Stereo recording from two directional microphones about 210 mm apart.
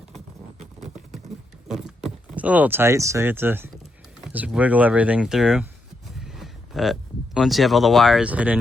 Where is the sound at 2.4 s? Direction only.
5° right (ahead or behind).